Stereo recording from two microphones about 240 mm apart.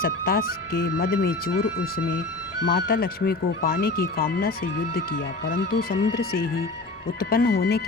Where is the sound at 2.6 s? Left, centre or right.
Left.